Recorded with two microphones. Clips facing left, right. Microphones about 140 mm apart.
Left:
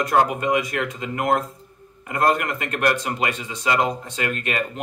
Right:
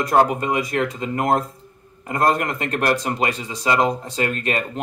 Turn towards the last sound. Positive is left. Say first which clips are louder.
# right 2 dB
turn(degrees=-35)  # may be behind; listen again after turning